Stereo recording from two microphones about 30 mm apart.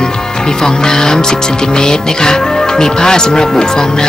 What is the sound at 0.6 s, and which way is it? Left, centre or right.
Music, left.